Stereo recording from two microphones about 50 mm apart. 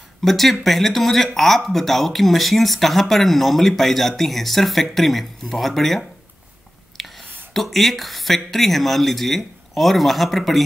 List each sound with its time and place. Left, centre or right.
0.2 s speech: centre